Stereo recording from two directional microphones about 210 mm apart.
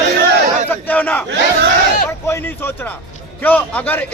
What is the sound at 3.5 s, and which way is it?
Speech, 10° left (ahead or behind).